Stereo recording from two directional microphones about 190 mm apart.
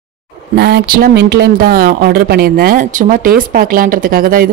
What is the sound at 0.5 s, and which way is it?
Speech, 60° right (ahead or behind).